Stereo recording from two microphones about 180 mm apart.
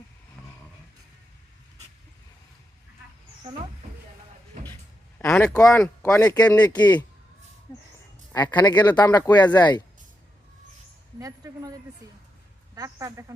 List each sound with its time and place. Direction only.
5.2 s a sound: 15° left (ahead or behind)
5.5 s speech: 20° left (ahead or behind)
8.3 s speech: 20° left (ahead or behind)
11.2 s speech: 20° right (ahead or behind)
12.7 s speech: 20° right (ahead or behind)